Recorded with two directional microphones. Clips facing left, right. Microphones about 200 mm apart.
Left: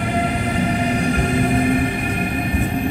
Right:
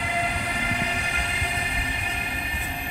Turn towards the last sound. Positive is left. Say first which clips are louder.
# left 16 dB
turn(degrees=55)  # may be behind; listen again after turning